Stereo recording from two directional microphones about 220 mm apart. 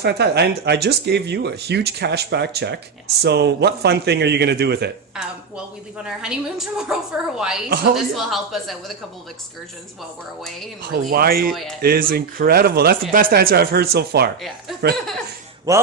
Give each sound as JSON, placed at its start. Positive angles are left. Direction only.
{"t": 0.0, "sound": "speech", "side_deg": -50}
{"t": 6.0, "sound": "a woman's voice", "side_deg": -5}
{"t": 11.1, "sound": "speech", "side_deg": -45}
{"t": 15.7, "sound": "speech", "side_deg": -15}